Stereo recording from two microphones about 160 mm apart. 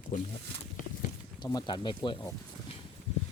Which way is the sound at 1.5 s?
30° left (ahead or behind).